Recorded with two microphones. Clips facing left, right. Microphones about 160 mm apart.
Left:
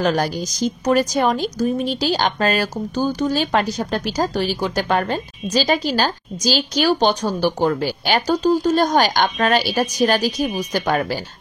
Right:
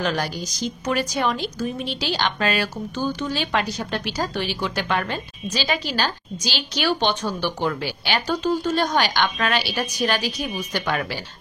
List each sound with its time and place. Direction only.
0.0 s a woman's voice: 45° left (ahead or behind)